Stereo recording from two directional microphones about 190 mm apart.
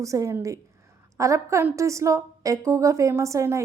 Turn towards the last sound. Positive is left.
turn(degrees=-15)  # may be behind; listen again after turning